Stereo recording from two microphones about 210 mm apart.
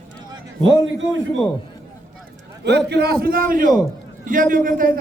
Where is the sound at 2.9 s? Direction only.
50° right (ahead or behind).